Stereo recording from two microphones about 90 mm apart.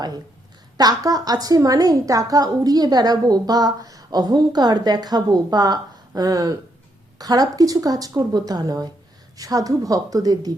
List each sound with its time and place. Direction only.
0.8 s a woman's voice: 45° right (ahead or behind)